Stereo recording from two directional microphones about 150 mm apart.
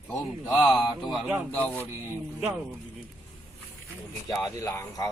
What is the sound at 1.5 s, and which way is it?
Speech, 10° left (ahead or behind).